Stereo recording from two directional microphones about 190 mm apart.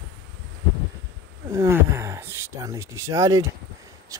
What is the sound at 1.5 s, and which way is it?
Speech, 15° right (ahead or behind).